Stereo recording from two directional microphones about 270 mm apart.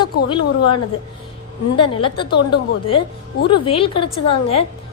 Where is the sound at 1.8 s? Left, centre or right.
Centre.